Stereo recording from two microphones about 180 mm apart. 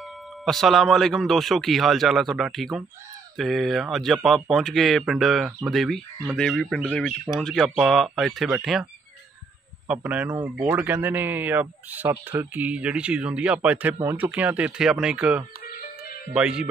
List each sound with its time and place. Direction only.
0.5 s speech: centre (ahead or behind)
9.8 s a man's voice: 10° right (ahead or behind)
15.6 s music: 50° left (ahead or behind)
16.3 s speech: 5° right (ahead or behind)